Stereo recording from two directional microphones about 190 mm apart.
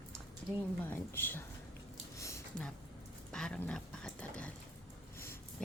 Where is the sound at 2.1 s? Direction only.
15° left (ahead or behind).